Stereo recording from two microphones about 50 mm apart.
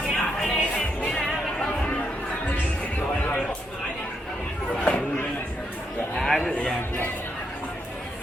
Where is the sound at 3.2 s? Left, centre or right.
Left.